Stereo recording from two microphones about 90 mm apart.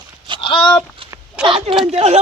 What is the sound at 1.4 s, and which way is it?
Speech, 85° right.